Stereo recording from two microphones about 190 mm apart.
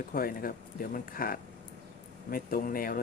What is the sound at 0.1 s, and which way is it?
Speech, 50° left (ahead or behind).